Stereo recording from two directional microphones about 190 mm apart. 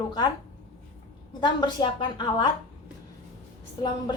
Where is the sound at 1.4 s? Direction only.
25° left (ahead or behind).